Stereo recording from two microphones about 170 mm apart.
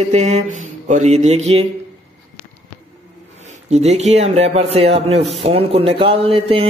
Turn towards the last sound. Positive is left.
turn(degrees=-35)  # may be behind; listen again after turning